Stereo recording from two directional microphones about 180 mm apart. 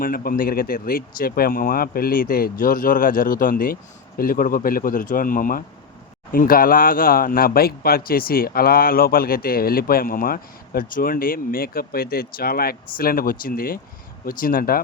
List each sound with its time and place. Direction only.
0.0 s speech: 55° left (ahead or behind)